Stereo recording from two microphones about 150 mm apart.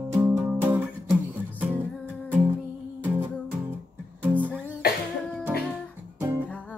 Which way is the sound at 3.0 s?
15° right (ahead or behind).